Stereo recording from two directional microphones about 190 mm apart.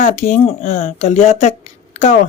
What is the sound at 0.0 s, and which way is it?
Speech, 40° left (ahead or behind).